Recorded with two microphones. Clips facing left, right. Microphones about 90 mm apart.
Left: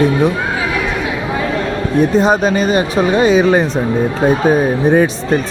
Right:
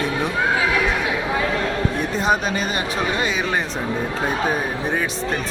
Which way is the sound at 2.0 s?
25° left (ahead or behind).